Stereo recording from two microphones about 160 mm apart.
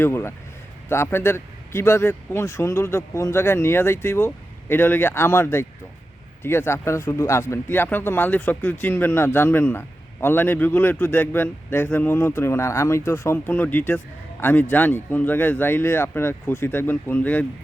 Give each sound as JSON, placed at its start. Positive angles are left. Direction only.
{"t": 0.0, "sound": "speech", "side_deg": 15}